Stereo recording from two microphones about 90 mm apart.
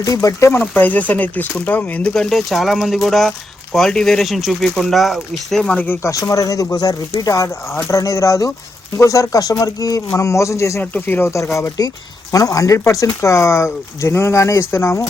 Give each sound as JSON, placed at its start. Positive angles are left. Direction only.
{"t": 0.0, "sound": "speech", "side_deg": 40}
{"t": 0.7, "sound": "speech", "side_deg": 20}
{"t": 5.7, "sound": "speech", "side_deg": 20}
{"t": 6.0, "sound": "speech", "side_deg": 35}
{"t": 10.9, "sound": "speech", "side_deg": 20}